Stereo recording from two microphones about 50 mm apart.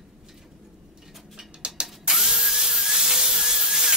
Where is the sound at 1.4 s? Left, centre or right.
Centre.